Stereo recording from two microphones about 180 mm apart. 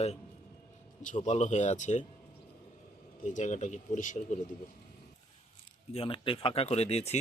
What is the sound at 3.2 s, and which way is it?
Speech, 40° left (ahead or behind).